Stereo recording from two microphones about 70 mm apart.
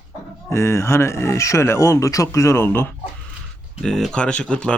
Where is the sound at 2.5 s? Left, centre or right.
Left.